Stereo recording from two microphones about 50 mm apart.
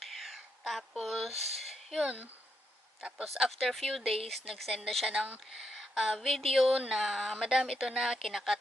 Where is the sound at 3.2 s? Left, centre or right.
Centre.